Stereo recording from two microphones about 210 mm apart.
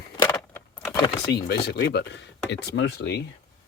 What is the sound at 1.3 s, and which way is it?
Speech, 50° left (ahead or behind).